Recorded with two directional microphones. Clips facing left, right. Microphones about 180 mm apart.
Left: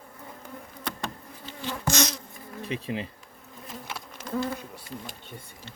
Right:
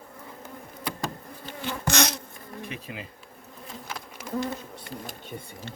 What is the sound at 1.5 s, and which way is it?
Bee, 60° right (ahead or behind).